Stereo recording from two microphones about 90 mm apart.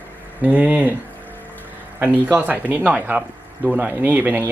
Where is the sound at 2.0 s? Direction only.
20° right (ahead or behind).